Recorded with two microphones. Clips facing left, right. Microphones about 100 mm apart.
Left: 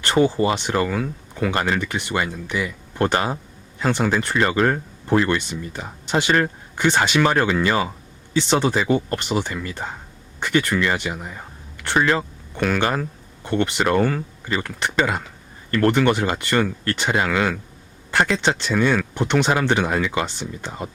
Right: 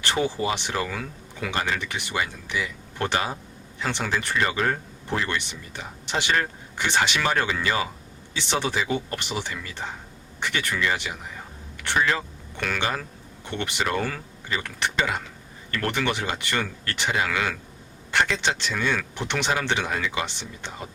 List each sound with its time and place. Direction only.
0.0 s speech: 50° left (ahead or behind)